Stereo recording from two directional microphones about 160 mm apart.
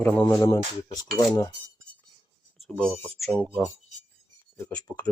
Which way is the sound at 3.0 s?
5° left (ahead or behind).